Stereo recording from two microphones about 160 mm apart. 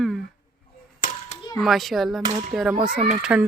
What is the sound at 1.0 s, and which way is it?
Clapping, 60° left (ahead or behind).